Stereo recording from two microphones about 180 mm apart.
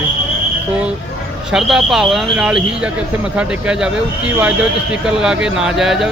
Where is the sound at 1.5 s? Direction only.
Centre (ahead or behind).